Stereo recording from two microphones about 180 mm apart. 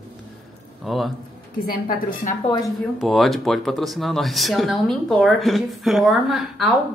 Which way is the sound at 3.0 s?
Centre (ahead or behind).